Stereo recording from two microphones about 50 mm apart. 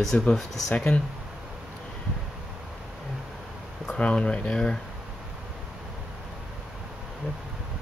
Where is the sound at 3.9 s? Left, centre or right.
Left.